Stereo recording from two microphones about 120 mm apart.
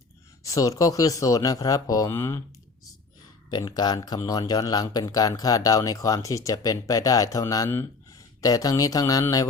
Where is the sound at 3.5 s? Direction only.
35° left (ahead or behind).